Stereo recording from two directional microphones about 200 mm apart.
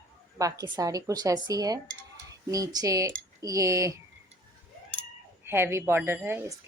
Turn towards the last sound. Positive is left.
turn(degrees=-10)  # may be behind; listen again after turning